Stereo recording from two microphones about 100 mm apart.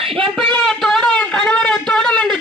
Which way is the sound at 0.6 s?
5° left (ahead or behind).